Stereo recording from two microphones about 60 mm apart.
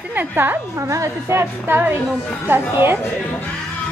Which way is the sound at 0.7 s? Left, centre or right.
Right.